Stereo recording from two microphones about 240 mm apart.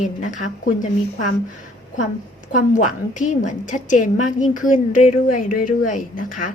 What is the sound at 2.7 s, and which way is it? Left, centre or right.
A woman's voice, left.